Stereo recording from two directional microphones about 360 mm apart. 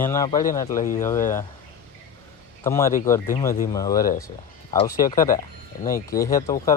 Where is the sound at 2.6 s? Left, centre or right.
Centre.